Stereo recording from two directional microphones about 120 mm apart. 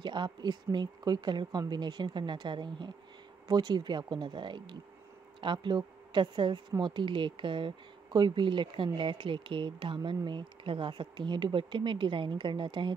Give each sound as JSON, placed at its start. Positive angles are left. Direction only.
{"t": 0.0, "sound": "speech", "side_deg": -40}